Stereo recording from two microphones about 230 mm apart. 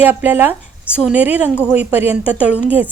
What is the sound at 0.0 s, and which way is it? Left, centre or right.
A woman's voice, centre.